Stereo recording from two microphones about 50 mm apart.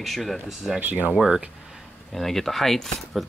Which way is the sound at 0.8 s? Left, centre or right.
Right.